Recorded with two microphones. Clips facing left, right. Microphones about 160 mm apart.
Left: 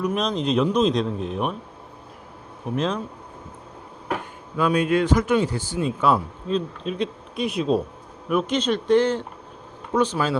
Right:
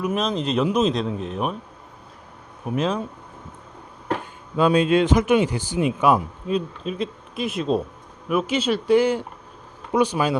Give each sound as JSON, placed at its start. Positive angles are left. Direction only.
{"t": 0.0, "sound": "speech", "side_deg": 0}
{"t": 2.7, "sound": "speech", "side_deg": -5}
{"t": 4.5, "sound": "speech", "side_deg": -25}
{"t": 6.8, "sound": "speech", "side_deg": 0}